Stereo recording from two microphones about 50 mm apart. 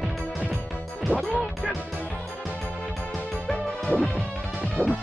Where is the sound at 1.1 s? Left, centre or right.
Right.